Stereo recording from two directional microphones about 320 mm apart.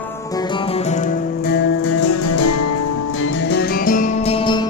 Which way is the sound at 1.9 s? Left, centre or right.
Left.